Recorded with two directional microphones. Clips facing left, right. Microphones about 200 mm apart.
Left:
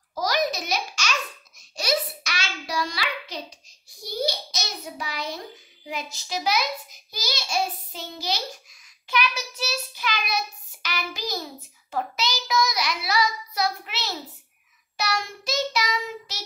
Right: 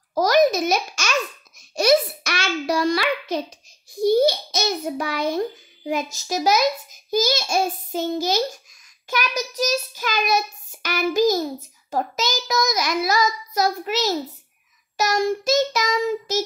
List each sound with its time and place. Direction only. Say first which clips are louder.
0.1 s a sound: right 9 dB; 50° right (ahead or behind)
1.8 s child singing: right 9 dB; 55° right (ahead or behind)
4.0 s a child's voice: right 12 dB; 55° right (ahead or behind)
9.1 s child singing: right 2 dB; 40° right (ahead or behind)